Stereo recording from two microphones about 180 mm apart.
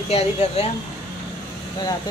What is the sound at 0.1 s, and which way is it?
Speech, 35° left (ahead or behind).